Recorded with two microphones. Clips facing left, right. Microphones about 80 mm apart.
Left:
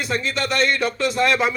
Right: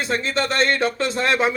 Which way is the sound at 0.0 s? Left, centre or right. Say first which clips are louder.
Right 1 dB; right.